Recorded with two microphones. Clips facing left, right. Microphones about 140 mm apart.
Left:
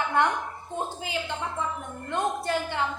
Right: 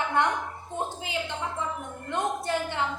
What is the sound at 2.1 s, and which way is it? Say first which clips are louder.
Speech: left 1 dB; 20° right (ahead or behind).